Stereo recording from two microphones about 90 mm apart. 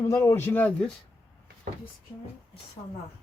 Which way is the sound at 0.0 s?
30° left (ahead or behind).